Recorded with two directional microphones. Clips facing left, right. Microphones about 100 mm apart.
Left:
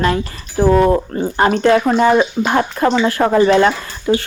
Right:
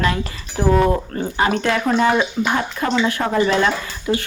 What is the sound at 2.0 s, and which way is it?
Speech, 35° left (ahead or behind).